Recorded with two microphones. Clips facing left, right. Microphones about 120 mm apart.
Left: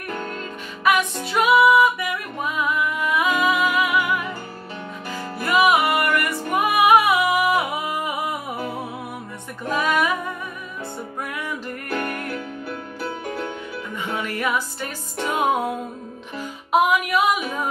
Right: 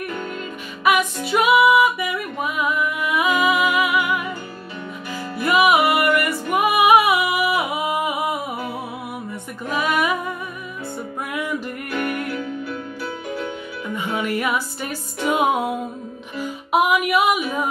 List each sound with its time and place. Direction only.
1.2 s music: 10° right (ahead or behind)
5.4 s music: 15° right (ahead or behind)
9.7 s music: 10° right (ahead or behind)
11.9 s music: 40° left (ahead or behind)
13.9 s music: 10° right (ahead or behind)